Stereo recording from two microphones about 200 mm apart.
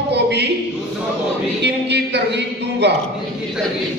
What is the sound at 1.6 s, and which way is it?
A man's voice, 60° right (ahead or behind).